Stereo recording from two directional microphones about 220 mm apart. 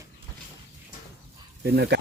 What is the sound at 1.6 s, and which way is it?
Speech, 45° right (ahead or behind).